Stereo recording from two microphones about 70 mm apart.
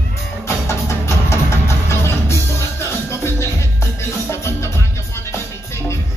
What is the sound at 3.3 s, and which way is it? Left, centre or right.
Music, left.